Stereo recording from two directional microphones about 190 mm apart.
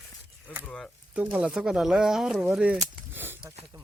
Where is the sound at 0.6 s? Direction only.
5° left (ahead or behind).